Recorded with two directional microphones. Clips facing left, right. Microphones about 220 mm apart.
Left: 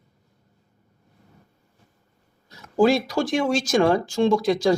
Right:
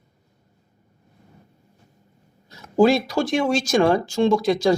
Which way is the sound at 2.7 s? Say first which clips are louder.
Right 2 dB; 25° right (ahead or behind).